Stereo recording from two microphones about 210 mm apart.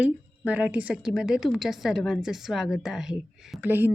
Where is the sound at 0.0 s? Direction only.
5° right (ahead or behind).